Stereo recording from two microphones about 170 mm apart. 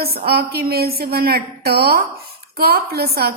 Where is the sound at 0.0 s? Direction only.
65° right (ahead or behind).